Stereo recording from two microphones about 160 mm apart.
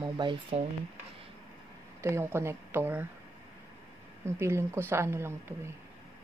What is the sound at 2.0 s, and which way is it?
Speech, 15° right (ahead or behind).